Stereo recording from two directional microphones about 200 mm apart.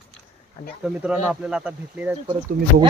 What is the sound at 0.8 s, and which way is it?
Speech, 5° right (ahead or behind).